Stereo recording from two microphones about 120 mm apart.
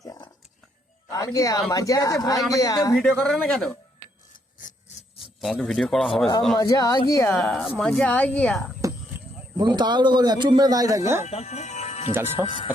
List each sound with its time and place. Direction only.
0.0 s music: 30° left (ahead or behind)
1.1 s speech: 30° left (ahead or behind)
2.9 s speech: 5° left (ahead or behind)
5.4 s a man's voice: centre (ahead or behind)
6.6 s speech: 30° left (ahead or behind)
7.3 s speech: 10° left (ahead or behind)
8.8 s a sound: 25° right (ahead or behind)
9.6 s speech: 40° right (ahead or behind); by 11.3 s 25° right (ahead or behind)
11.3 s music: 65° left (ahead or behind)
12.1 s speech: 20° right (ahead or behind)